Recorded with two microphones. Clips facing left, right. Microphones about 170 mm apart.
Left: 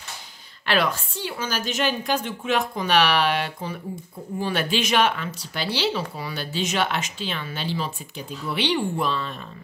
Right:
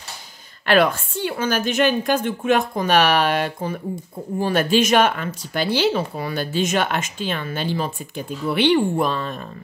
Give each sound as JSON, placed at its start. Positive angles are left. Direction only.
{"t": 0.7, "sound": "speech", "side_deg": -50}